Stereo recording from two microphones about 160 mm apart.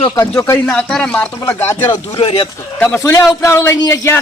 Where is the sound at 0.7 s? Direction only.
5° left (ahead or behind); by 2.5 s 35° left (ahead or behind).